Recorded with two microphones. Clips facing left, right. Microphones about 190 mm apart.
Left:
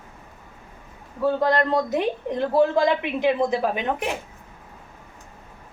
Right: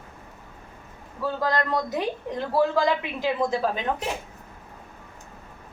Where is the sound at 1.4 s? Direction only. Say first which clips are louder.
Left 2 dB; 25° left (ahead or behind).